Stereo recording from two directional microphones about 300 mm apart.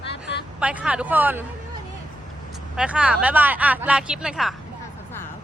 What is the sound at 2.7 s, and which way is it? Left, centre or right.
Speech, centre.